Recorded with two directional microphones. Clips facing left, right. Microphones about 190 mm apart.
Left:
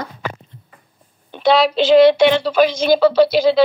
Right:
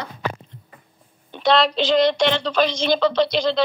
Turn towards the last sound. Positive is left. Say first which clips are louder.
# left 7 dB
turn(degrees=5)  # may be behind; listen again after turning